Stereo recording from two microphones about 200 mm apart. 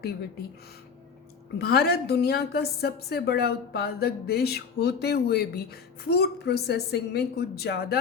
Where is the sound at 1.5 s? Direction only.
50° left (ahead or behind).